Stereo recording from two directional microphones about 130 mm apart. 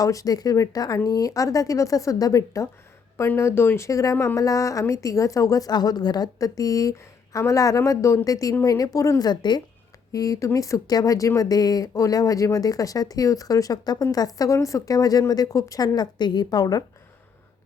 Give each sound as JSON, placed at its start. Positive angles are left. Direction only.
{"t": 0.0, "sound": "speech", "side_deg": 25}